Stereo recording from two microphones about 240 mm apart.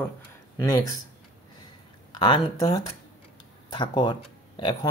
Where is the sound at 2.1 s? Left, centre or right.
Centre.